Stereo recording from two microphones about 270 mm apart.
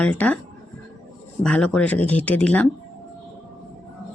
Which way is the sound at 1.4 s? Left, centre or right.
Centre.